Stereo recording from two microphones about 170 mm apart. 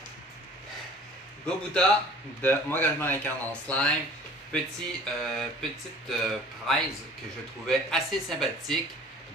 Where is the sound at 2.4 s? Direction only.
10° left (ahead or behind).